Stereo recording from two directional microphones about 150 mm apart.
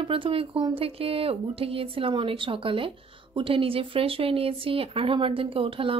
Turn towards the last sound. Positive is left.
turn(degrees=-35)  # may be behind; listen again after turning